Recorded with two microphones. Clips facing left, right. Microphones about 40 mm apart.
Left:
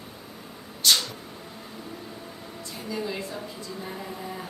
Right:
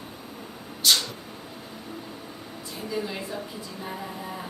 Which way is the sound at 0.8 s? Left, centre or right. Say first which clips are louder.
Even; centre.